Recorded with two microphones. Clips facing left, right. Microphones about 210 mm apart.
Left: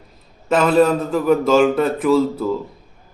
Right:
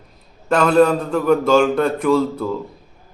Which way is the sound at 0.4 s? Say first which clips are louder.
Even; centre (ahead or behind).